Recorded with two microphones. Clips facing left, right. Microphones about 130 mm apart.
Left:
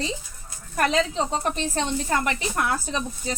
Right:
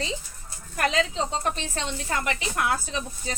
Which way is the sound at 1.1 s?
50° left (ahead or behind).